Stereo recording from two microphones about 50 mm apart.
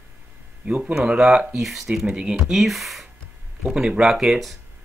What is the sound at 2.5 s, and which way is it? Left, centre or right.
Speech, centre.